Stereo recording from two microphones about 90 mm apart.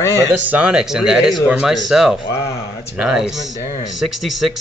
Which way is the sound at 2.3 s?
30° left (ahead or behind).